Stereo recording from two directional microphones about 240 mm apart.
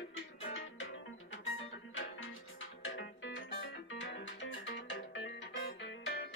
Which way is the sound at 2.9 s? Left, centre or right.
Left.